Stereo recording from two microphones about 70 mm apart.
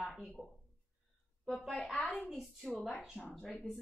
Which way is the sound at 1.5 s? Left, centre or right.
Centre.